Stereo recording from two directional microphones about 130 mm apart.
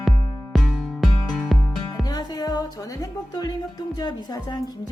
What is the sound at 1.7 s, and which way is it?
Speech, 25° left (ahead or behind).